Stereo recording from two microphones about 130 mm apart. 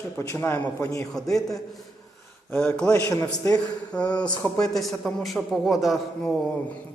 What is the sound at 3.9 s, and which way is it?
A man's voice, 10° left (ahead or behind).